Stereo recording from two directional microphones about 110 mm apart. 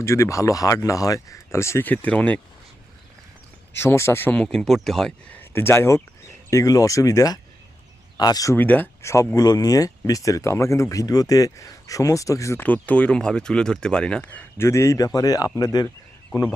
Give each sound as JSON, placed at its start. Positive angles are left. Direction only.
{"t": 0.0, "sound": "speech", "side_deg": 25}
{"t": 3.7, "sound": "speech", "side_deg": 20}
{"t": 4.4, "sound": "speech", "side_deg": 5}
{"t": 5.3, "sound": "speech", "side_deg": 20}
{"t": 8.5, "sound": "speech", "side_deg": 15}
{"t": 9.3, "sound": "speech", "side_deg": 35}
{"t": 12.5, "sound": "speech", "side_deg": 15}
{"t": 14.6, "sound": "speech", "side_deg": 25}